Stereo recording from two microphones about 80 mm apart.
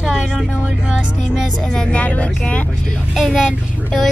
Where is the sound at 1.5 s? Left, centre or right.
Centre.